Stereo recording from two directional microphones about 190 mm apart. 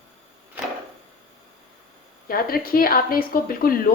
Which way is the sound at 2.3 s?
50° left (ahead or behind).